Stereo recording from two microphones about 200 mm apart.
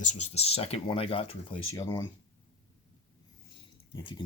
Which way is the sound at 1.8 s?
15° left (ahead or behind).